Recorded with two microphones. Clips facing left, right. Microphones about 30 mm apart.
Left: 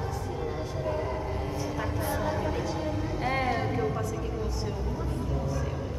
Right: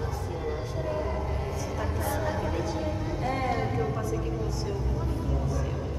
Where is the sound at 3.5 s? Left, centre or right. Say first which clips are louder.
Even; centre.